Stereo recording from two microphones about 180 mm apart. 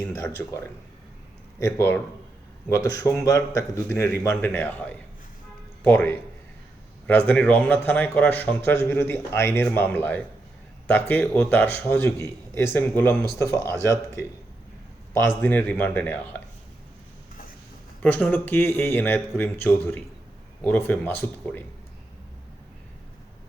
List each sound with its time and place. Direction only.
0.1 s speech: 15° left (ahead or behind)
15.4 s speech: 10° left (ahead or behind)
18.0 s speech: 10° left (ahead or behind)